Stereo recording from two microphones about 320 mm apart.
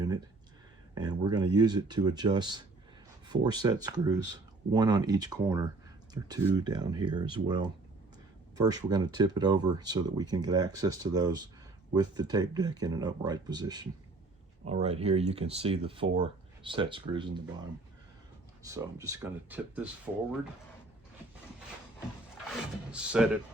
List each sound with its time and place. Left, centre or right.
0.9 s speech: centre
18.6 s speech: centre
22.9 s speech: centre